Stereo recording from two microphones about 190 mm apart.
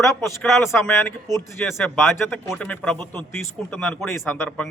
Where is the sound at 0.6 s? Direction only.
15° left (ahead or behind).